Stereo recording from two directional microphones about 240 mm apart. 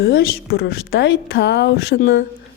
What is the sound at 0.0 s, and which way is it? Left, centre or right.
A woman's voice, left.